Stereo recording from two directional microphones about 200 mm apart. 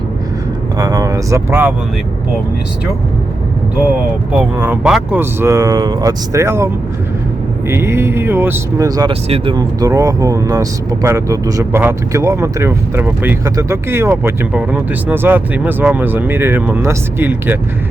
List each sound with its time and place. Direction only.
0.8 s speech: 20° right (ahead or behind)
4.3 s speech: 10° right (ahead or behind)
7.7 s speech: 15° right (ahead or behind)